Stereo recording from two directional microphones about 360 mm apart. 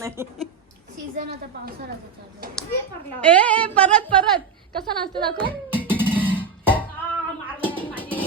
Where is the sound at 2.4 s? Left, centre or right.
Right.